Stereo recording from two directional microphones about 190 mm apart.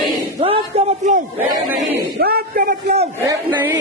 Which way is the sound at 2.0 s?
55° right (ahead or behind).